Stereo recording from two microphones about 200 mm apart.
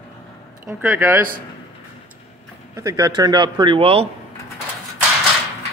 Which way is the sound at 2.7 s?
15° right (ahead or behind).